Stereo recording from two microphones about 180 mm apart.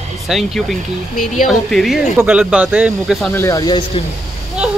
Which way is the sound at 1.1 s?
45° left (ahead or behind).